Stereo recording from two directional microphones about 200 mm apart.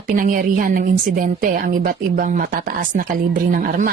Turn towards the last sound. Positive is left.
turn(degrees=-45)  # may be behind; listen again after turning